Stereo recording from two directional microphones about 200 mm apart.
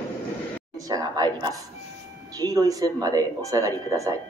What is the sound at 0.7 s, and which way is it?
A woman's voice, 15° right (ahead or behind).